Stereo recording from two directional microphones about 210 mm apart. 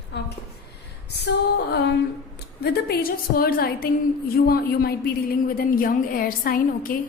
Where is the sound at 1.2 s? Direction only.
50° left (ahead or behind).